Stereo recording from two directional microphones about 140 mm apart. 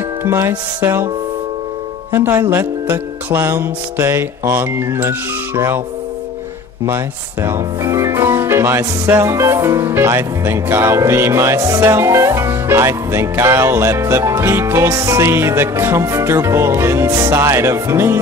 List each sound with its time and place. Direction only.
0.2 s speech: 15° right (ahead or behind)
2.1 s speech: 15° right (ahead or behind)
7.4 s speech: 20° right (ahead or behind)